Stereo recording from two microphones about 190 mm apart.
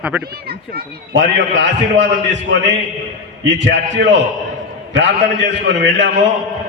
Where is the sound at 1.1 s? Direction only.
70° right (ahead or behind).